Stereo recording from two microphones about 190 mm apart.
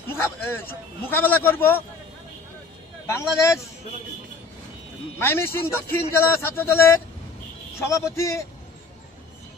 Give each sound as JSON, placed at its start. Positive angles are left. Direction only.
{"t": 0.1, "sound": "a man's voice", "side_deg": 10}
{"t": 3.1, "sound": "a man's voice", "side_deg": 15}
{"t": 5.2, "sound": "a man's voice", "side_deg": 10}